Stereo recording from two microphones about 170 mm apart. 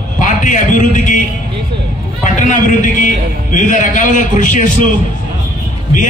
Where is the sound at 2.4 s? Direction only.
50° left (ahead or behind).